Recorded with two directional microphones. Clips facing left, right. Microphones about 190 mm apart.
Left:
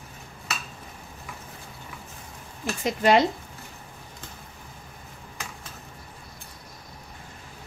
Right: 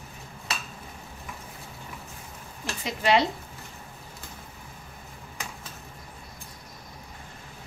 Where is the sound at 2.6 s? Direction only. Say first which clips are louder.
Left 5 dB; 45° left (ahead or behind).